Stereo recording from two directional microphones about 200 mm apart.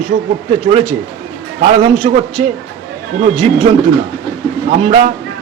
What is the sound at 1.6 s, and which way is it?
Speech, 30° right (ahead or behind).